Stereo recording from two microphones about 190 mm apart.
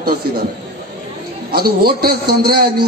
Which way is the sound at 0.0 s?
55° right (ahead or behind).